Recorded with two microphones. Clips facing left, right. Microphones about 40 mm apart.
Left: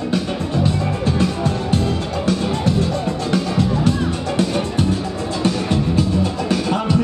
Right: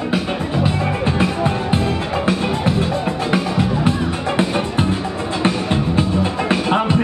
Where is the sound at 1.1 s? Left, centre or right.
Right.